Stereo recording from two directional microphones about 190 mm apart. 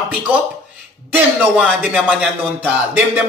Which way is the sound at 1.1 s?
5° right (ahead or behind).